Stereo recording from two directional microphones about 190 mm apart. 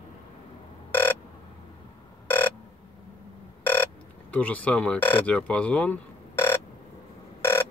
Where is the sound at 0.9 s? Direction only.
10° left (ahead or behind).